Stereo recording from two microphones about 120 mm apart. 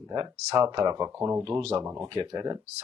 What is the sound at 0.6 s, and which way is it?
Speech, 35° right (ahead or behind).